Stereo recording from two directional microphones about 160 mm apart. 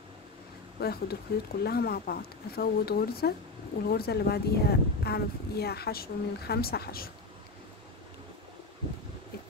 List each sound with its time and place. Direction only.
0.7 s speech: 80° left